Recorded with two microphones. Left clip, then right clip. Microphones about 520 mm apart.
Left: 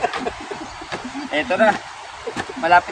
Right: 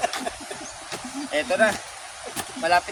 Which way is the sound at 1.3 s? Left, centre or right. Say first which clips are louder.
Left 4 dB; right.